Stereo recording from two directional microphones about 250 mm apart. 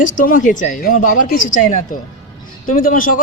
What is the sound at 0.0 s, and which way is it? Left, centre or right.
A man's voice, left.